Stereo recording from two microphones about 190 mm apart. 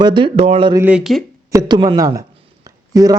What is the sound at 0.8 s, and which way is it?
Speech, 5° right (ahead or behind).